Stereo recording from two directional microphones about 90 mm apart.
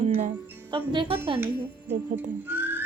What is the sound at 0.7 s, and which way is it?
Speech, 70° right (ahead or behind).